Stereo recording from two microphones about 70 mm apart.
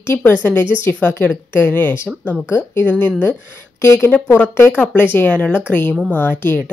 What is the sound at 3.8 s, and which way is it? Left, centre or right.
Speech, left.